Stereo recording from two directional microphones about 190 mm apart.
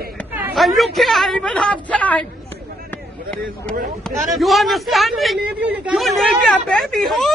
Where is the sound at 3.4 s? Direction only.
50° right (ahead or behind).